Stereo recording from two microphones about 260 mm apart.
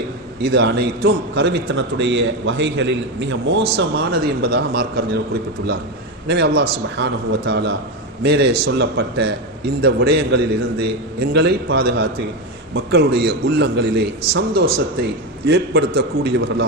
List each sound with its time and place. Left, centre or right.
0.3 s a man's voice: right
6.2 s a man's voice: right